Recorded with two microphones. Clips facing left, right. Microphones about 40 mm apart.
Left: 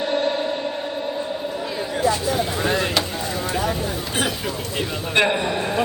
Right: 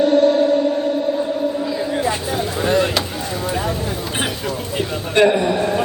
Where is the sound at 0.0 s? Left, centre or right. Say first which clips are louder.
Right 8 dB; left.